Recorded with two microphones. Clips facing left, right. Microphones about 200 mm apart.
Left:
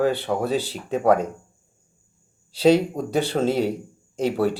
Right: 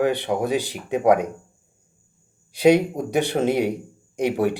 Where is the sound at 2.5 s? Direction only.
15° right (ahead or behind).